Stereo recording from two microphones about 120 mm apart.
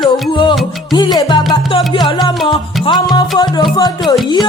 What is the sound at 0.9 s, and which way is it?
Music, 35° left (ahead or behind).